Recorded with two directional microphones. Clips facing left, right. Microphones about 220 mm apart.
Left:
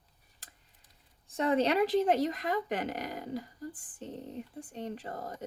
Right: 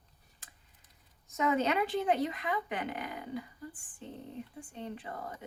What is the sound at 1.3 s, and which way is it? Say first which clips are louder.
Speech: left 2 dB; 30° left (ahead or behind).